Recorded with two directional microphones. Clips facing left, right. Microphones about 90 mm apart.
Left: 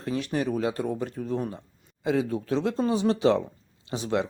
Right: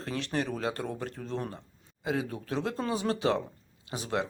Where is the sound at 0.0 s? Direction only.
20° left (ahead or behind).